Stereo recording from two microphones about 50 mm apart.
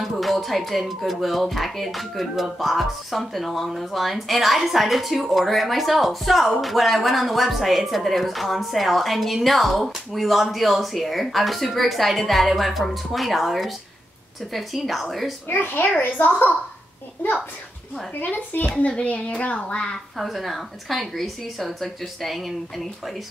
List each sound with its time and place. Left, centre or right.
0.0 s speech: centre
15.4 s a child's voice: left
18.2 s speech: left
19.0 s speech: left
20.2 s speech: centre